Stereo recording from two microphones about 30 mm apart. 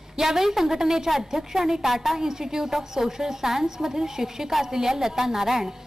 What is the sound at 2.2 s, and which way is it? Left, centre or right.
A woman's voice, centre.